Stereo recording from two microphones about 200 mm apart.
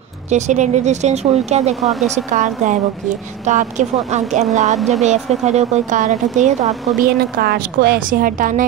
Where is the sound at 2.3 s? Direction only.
35° right (ahead or behind).